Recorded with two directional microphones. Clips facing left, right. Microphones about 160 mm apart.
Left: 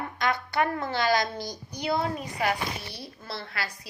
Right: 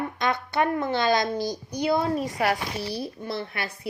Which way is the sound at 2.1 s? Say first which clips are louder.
Right 4 dB; 45° right (ahead or behind).